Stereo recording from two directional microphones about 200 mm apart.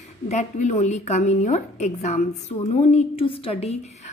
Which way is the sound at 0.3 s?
35° left (ahead or behind).